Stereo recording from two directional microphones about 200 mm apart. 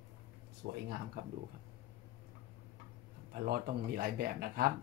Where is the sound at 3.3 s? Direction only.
50° right (ahead or behind).